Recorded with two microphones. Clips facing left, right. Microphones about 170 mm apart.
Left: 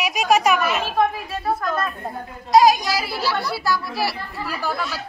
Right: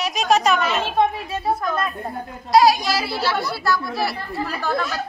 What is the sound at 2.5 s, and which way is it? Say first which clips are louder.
A woman's voice: left 1 dB; 15° left (ahead or behind).